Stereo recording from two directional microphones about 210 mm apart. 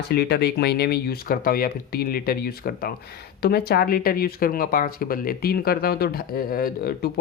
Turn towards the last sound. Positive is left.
turn(degrees=45)  # may be behind; listen again after turning